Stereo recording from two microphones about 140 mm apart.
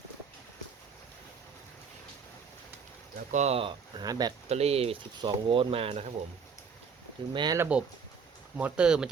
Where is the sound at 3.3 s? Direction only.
55° right (ahead or behind).